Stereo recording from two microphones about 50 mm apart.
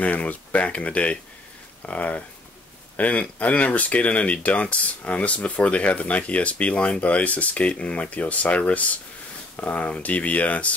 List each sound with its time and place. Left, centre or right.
0.0 s speech: left